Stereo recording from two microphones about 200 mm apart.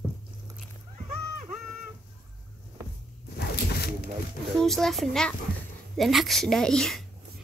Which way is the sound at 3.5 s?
55° left (ahead or behind).